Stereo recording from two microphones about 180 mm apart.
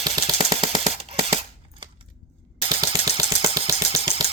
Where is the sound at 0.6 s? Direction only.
30° right (ahead or behind).